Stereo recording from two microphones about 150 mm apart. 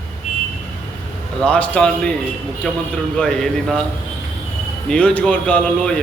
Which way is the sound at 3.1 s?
5° left (ahead or behind).